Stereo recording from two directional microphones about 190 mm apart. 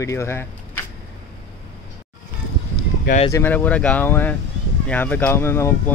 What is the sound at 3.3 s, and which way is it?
Speech, 10° left (ahead or behind).